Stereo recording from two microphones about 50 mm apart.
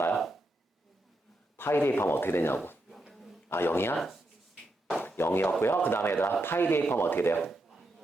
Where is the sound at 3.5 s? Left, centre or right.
Left.